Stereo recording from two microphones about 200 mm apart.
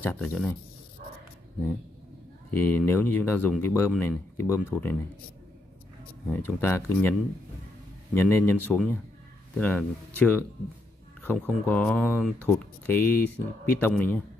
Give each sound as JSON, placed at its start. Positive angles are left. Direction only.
{"t": 0.0, "sound": "speech", "side_deg": 10}
{"t": 2.5, "sound": "speech", "side_deg": 10}
{"t": 6.2, "sound": "speech", "side_deg": 10}
{"t": 12.2, "sound": "speech", "side_deg": -5}
{"t": 12.4, "sound": "speech", "side_deg": 10}